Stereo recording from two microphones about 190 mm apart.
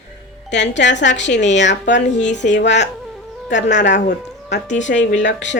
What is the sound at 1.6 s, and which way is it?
Speech, 70° left (ahead or behind).